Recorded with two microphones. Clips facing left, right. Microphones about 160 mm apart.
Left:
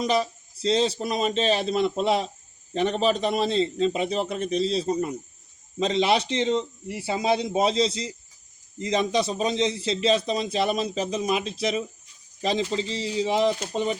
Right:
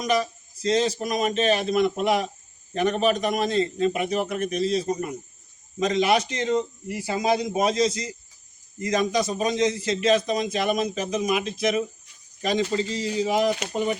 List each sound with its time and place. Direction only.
0.6 s a man's voice: 30° left (ahead or behind)